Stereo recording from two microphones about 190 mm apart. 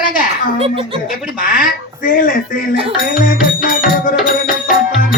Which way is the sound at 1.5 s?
45° left (ahead or behind).